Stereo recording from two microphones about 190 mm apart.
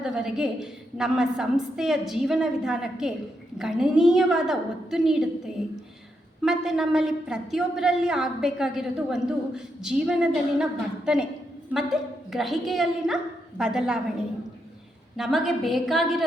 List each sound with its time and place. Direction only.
0.0 s a woman's voice: 5° right (ahead or behind)
6.4 s a woman's voice: 5° right (ahead or behind)
15.1 s a woman's voice: centre (ahead or behind)